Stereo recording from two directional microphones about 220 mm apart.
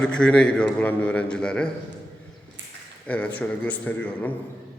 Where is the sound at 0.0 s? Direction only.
5° left (ahead or behind).